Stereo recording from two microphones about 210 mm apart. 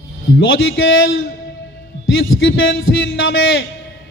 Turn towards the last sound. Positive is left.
turn(degrees=65)  # may be behind; listen again after turning